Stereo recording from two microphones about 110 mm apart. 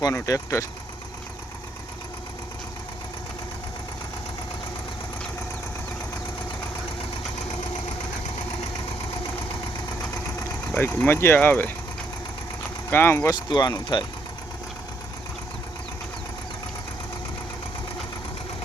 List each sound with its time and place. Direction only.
0.3 s speech: 25° left (ahead or behind)
10.8 s speech: 15° left (ahead or behind)
12.9 s speech: 20° left (ahead or behind)
13.5 s speech: 45° left (ahead or behind)